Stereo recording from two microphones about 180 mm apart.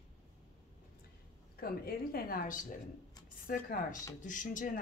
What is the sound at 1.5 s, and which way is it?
Speech, 55° left (ahead or behind).